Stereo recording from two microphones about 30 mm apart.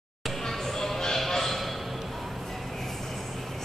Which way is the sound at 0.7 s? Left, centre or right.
Centre.